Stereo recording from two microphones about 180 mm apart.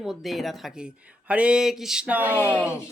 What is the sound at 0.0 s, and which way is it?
Speech, centre (ahead or behind).